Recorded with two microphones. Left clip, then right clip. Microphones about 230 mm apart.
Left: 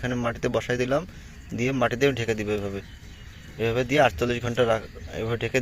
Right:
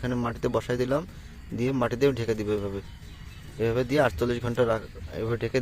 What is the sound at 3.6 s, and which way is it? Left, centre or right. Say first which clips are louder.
A man's voice: left 3 dB; centre.